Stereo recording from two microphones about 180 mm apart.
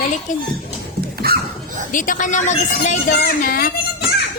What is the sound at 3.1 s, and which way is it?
Speech, 55° left (ahead or behind).